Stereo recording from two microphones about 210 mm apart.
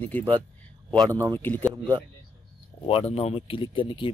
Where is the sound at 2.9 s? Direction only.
30° left (ahead or behind).